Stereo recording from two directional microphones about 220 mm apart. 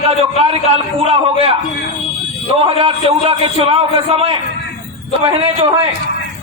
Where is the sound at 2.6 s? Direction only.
25° right (ahead or behind).